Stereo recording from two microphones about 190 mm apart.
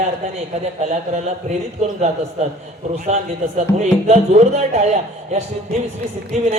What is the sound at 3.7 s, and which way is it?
Music, 35° right (ahead or behind).